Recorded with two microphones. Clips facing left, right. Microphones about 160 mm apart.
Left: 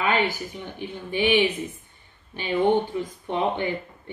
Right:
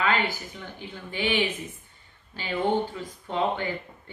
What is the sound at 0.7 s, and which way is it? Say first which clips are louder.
Speech: left 7 dB; 20° left (ahead or behind).